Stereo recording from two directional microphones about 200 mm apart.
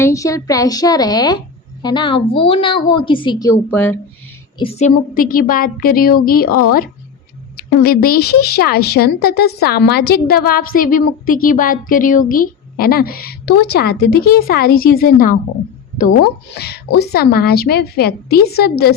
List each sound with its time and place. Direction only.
0.0 s a woman's voice: 15° left (ahead or behind)
4.5 s a woman's voice: 30° left (ahead or behind); by 18.9 s 50° left (ahead or behind)